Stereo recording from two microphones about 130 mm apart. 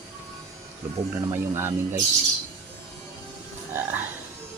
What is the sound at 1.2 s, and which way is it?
Speech, 20° right (ahead or behind).